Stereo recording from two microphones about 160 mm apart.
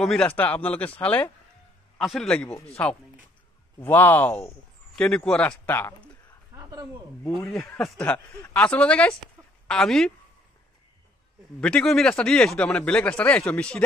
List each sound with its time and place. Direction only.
0.0 s a man's voice: 5° left (ahead or behind)
3.8 s speech: 10° left (ahead or behind)
6.5 s a sound: 20° right (ahead or behind)
7.4 s a man's voice: 20° left (ahead or behind); by 10.1 s 5° left (ahead or behind)
11.6 s speech: 5° left (ahead or behind)